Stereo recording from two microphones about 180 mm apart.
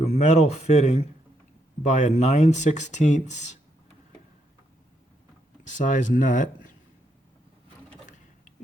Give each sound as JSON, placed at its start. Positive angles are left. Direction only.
{"t": 0.0, "sound": "speech", "side_deg": 35}
{"t": 5.6, "sound": "speech", "side_deg": 45}